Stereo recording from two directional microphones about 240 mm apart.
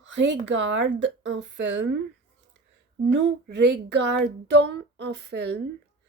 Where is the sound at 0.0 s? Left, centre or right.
Right.